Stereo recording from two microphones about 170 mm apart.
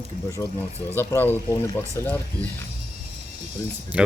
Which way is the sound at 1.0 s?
15° left (ahead or behind).